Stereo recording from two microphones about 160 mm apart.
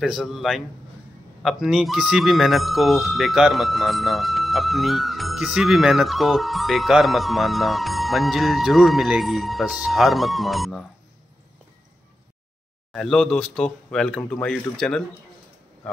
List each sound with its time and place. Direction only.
0.0 s speech: centre (ahead or behind)
12.9 s speech: 5° left (ahead or behind)